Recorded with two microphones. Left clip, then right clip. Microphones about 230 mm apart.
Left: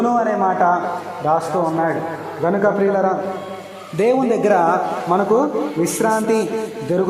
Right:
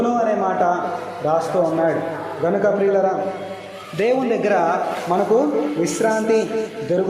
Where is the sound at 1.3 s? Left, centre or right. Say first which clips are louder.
Left 2 dB; left.